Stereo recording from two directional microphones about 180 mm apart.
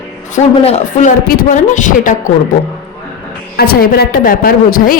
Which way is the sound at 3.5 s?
60° left (ahead or behind).